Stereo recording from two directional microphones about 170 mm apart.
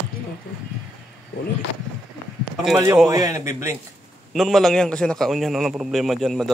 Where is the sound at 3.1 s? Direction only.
20° right (ahead or behind).